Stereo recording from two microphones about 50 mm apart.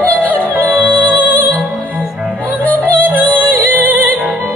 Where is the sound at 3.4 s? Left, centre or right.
Right.